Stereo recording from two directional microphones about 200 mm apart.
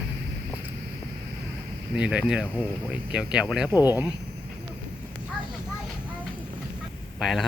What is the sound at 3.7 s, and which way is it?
Speech, 20° left (ahead or behind).